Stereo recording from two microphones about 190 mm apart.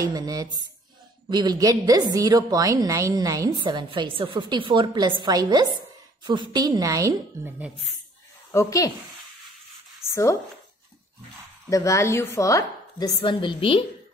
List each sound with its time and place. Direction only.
0.0 s a woman's voice: 20° right (ahead or behind)
8.5 s speech: 15° left (ahead or behind)
11.7 s chopping: 15° left (ahead or behind)